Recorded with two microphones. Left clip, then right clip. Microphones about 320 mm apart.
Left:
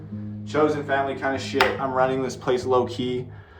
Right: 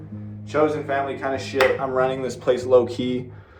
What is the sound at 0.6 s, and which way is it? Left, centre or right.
Music, centre.